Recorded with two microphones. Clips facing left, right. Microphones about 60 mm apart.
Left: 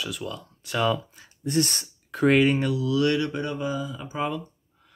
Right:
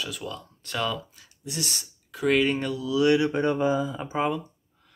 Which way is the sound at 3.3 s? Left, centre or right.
Right.